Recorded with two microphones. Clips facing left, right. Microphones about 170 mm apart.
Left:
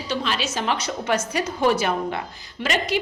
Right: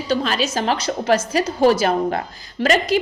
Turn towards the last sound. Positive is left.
turn(degrees=-40)  # may be behind; listen again after turning